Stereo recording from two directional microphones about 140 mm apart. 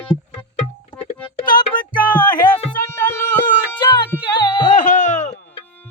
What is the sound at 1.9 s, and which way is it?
Music, 75° left (ahead or behind).